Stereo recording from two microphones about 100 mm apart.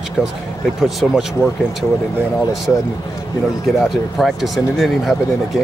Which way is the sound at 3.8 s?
Centre (ahead or behind).